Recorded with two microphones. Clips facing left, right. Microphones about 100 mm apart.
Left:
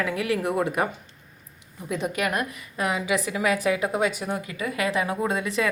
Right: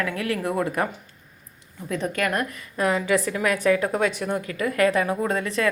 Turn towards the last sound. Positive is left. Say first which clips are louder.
# right 1 dB
turn(degrees=15)  # may be behind; listen again after turning